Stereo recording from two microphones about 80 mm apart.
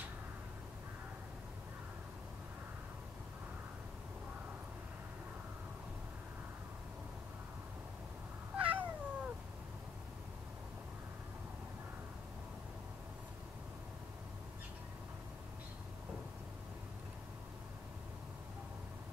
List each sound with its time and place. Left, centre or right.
8.5 s cat: centre